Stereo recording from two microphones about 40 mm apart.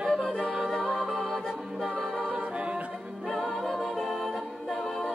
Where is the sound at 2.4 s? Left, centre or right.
Right.